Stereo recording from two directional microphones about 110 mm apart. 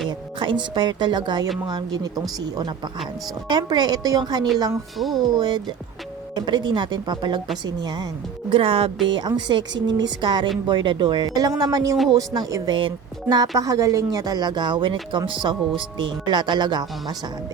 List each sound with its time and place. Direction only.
0.3 s speech: 45° right (ahead or behind)
3.5 s speech: 40° right (ahead or behind)
4.9 s speech: centre (ahead or behind)
5.3 s speech: 40° right (ahead or behind)
8.4 s speech: 55° right (ahead or behind)
9.0 s speech: 45° right (ahead or behind)